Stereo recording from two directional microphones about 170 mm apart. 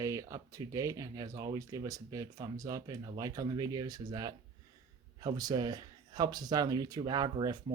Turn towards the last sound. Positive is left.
turn(degrees=-25)  # may be behind; listen again after turning